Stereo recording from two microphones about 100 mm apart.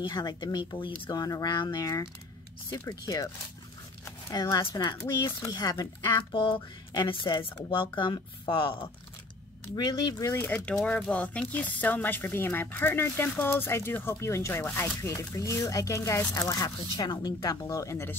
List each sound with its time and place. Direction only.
0.0 s speech: 45° left (ahead or behind)
1.1 s speech: 40° left (ahead or behind)
4.3 s speech: 40° left (ahead or behind)
6.3 s speech: 60° left (ahead or behind)
6.9 s speech: 50° left (ahead or behind)
9.8 s speech: 45° left (ahead or behind)
10.5 s speech: 10° left (ahead or behind); by 16.6 s 30° left (ahead or behind)
16.6 s speech: 40° left (ahead or behind)